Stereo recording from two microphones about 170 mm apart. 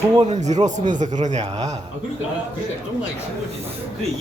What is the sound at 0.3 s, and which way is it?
Speech, 45° right (ahead or behind).